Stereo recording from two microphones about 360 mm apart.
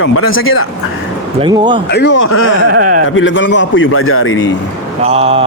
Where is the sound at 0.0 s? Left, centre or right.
Left.